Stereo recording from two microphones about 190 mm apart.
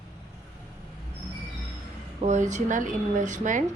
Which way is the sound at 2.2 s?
40° right (ahead or behind).